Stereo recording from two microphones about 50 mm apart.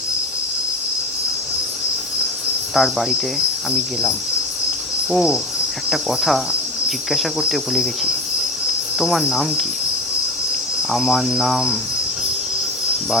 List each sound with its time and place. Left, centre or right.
2.7 s speech: centre
5.1 s insect: centre
5.9 s speech: centre
10.9 s speech: centre